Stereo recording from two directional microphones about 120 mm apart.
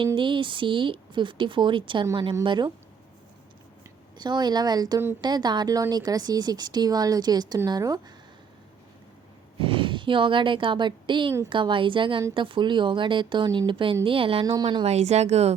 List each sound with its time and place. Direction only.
0.2 s speech: 45° right (ahead or behind)
4.2 s speech: 35° right (ahead or behind)
9.6 s speech: 50° right (ahead or behind)
14.8 s speech: 65° right (ahead or behind)